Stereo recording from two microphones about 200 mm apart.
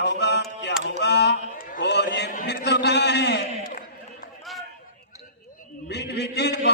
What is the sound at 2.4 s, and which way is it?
A man's voice, 55° left (ahead or behind).